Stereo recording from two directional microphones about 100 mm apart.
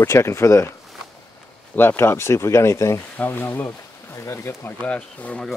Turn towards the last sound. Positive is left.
turn(degrees=10)  # may be behind; listen again after turning